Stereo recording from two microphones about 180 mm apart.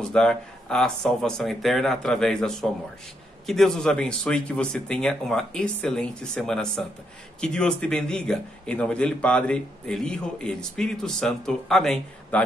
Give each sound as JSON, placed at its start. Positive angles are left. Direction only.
{"t": 0.0, "sound": "a man's voice", "side_deg": 5}